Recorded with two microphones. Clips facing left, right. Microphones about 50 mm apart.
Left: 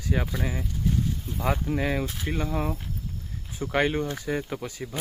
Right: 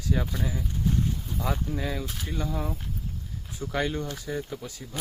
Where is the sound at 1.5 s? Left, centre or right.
Left.